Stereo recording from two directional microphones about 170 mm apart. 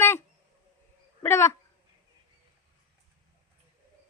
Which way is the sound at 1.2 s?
15° left (ahead or behind).